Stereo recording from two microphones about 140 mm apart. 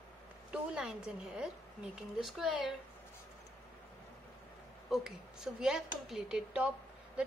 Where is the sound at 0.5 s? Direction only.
5° right (ahead or behind).